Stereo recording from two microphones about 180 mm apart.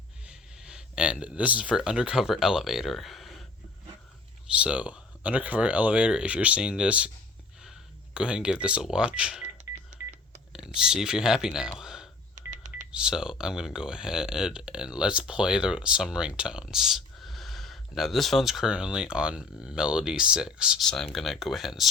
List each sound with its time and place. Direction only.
0.3 s speech: 5° right (ahead or behind)
4.6 s speech: 5° right (ahead or behind)
8.1 s speech: 5° right (ahead or behind)
10.8 s speech: 5° right (ahead or behind)
11.8 s a sound: 5° right (ahead or behind)
12.5 s telephone dialing: 45° right (ahead or behind)
12.9 s speech: 5° right (ahead or behind)